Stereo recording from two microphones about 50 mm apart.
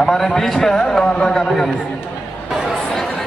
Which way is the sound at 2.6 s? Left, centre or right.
Centre.